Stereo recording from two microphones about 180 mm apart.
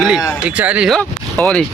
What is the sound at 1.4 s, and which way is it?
Speech, 5° left (ahead or behind).